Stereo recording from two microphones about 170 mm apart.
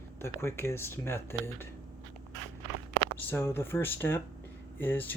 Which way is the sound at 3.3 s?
15° left (ahead or behind).